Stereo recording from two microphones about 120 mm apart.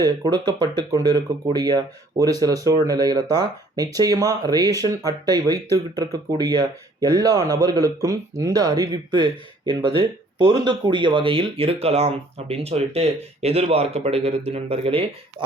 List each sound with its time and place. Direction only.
0.0 s speech: 35° right (ahead or behind)